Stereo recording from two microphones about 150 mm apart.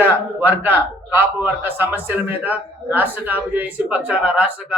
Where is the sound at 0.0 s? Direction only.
10° right (ahead or behind).